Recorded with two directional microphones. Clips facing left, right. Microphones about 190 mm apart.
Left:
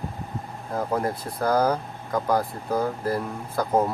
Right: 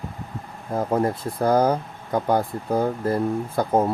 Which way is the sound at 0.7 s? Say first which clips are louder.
Right 4 dB; 25° right (ahead or behind).